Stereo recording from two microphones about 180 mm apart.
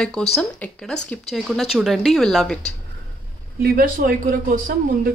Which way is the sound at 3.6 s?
55° right (ahead or behind).